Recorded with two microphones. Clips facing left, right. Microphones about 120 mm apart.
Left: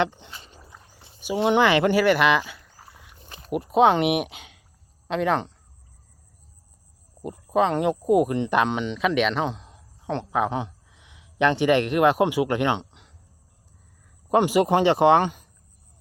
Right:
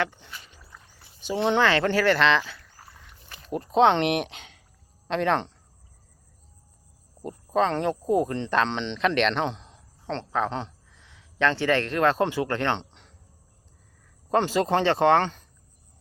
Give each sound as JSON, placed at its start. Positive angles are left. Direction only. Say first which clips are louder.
{"t": 0.0, "sound": "speech", "louder": "left 4 dB", "side_deg": 20}
{"t": 0.7, "sound": "a sound", "louder": "left 2 dB", "side_deg": 20}
{"t": 1.2, "sound": "speech", "louder": "left 3 dB", "side_deg": 10}
{"t": 7.2, "sound": "speech", "louder": "left 2 dB", "side_deg": 10}
{"t": 14.3, "sound": "speech", "louder": "left 4 dB", "side_deg": 15}